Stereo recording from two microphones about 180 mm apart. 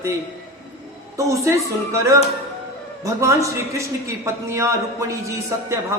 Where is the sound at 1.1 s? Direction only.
15° right (ahead or behind).